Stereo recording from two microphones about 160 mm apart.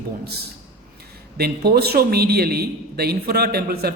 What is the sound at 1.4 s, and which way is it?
A man's voice, 80° right.